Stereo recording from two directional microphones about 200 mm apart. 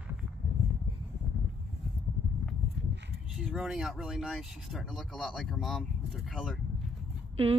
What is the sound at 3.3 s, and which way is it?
Speech, centre (ahead or behind).